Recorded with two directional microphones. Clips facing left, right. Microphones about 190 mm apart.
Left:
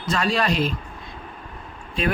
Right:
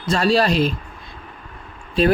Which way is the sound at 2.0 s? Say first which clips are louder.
Right 8 dB; 35° right (ahead or behind).